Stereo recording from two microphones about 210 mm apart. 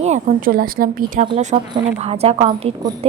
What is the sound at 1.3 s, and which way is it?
A woman's voice, 25° right (ahead or behind).